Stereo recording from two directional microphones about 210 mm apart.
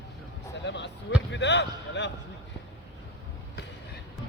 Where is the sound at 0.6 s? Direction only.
55° left (ahead or behind).